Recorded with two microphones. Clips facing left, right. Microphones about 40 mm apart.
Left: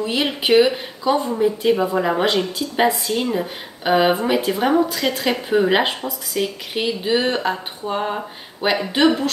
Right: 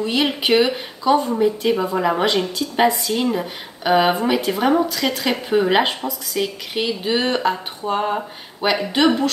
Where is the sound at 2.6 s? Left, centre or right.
Right.